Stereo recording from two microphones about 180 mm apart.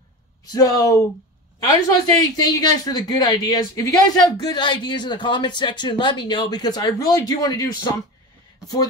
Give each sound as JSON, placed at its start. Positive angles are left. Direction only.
{"t": 0.5, "sound": "speech", "side_deg": 20}